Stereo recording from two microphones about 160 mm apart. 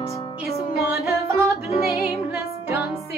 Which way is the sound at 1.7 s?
40° left (ahead or behind).